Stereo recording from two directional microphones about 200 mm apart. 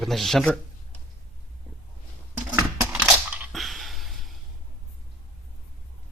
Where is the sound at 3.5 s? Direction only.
Centre (ahead or behind).